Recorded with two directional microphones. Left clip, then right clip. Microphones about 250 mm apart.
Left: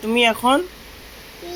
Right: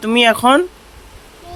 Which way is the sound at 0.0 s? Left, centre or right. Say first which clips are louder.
Right 5 dB; right.